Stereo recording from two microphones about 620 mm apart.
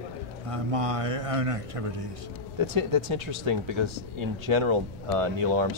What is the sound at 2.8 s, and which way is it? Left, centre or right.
Speech, right.